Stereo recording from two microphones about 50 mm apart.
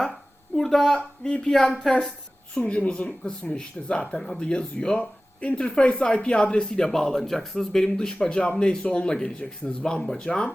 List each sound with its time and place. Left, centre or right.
0.5 s a woman's voice: centre
2.6 s speech: left